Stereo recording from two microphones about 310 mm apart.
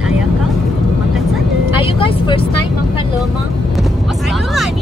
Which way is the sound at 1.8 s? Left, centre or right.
Centre.